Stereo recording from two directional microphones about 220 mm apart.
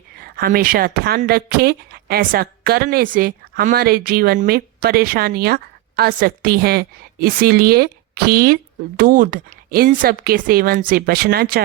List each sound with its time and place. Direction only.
0.2 s a woman's voice: 40° right (ahead or behind)